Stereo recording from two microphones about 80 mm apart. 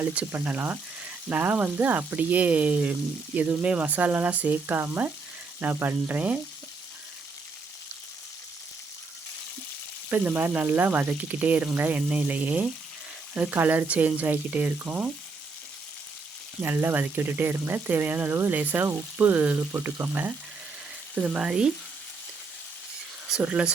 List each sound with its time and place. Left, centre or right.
0.0 s speech: centre
10.1 s speech: right
16.6 s speech: right
21.2 s speech: centre
23.4 s speech: centre